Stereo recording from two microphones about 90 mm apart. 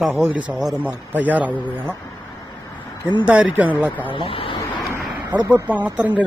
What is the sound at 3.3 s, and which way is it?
Speech, 15° right (ahead or behind).